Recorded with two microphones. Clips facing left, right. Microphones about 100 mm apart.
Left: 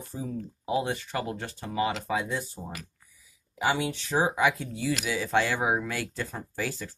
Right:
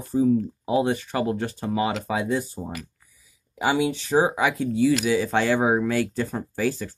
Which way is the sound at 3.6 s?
5° right (ahead or behind).